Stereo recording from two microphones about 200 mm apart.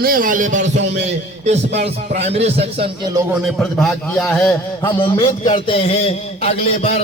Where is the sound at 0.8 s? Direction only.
60° right (ahead or behind).